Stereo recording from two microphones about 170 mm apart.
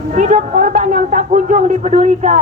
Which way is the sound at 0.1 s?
50° right (ahead or behind).